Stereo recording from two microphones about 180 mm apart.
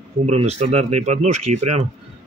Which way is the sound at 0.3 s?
35° right (ahead or behind).